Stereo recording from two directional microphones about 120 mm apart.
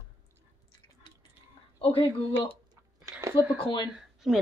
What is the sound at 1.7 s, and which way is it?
Speech, 50° left (ahead or behind).